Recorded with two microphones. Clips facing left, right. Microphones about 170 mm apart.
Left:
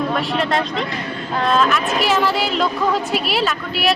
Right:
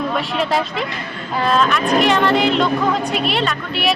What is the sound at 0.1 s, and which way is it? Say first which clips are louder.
Speech: even; centre (ahead or behind).